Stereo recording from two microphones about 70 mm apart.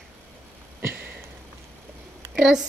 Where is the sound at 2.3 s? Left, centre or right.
Centre.